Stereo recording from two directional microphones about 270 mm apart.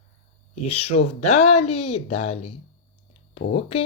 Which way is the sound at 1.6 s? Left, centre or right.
Left.